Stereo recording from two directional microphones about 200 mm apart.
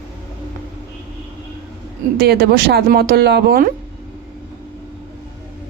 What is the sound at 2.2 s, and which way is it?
A woman's voice, 50° right (ahead or behind).